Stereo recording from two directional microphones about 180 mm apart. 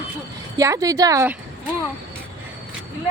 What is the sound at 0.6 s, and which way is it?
Speech, 20° right (ahead or behind).